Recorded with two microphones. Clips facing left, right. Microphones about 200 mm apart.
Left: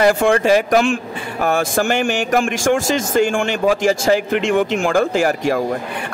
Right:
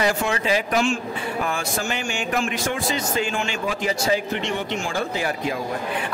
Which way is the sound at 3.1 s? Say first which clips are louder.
Left 8 dB; 50° left (ahead or behind).